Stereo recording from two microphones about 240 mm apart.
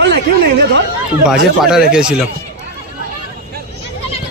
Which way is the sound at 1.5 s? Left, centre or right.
Centre.